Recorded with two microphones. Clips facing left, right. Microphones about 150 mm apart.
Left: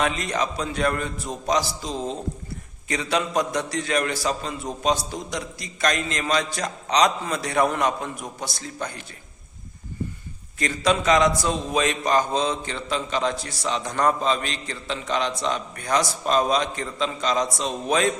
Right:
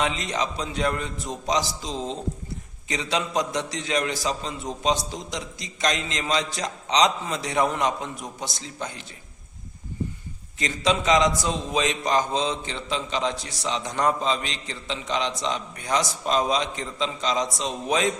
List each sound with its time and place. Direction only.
0.0 s a man's voice: 20° right (ahead or behind)
10.6 s a man's voice: 20° right (ahead or behind)